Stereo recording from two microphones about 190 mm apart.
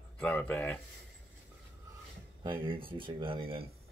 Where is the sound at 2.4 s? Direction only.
25° right (ahead or behind).